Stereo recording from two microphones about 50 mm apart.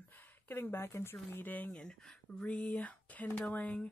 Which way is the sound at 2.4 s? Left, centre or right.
Left.